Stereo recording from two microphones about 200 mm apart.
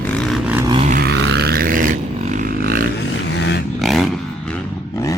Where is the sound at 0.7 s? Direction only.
35° right (ahead or behind).